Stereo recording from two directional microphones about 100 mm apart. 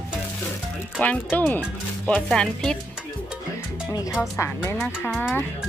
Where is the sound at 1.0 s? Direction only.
15° left (ahead or behind).